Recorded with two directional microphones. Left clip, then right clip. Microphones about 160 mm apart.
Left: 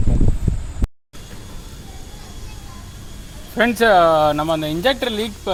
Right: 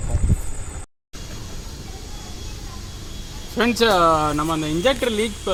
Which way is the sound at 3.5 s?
55° left (ahead or behind).